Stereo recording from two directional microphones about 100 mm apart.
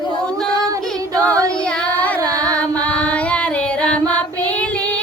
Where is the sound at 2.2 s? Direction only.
35° right (ahead or behind).